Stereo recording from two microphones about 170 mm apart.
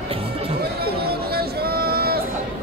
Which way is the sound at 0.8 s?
65° right (ahead or behind).